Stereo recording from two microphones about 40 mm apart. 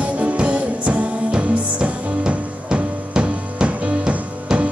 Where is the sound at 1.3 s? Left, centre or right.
Right.